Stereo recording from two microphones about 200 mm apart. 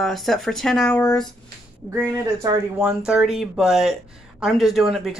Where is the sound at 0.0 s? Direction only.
Centre (ahead or behind).